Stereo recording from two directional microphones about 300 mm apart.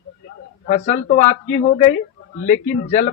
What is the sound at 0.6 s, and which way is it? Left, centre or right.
A man's voice, left.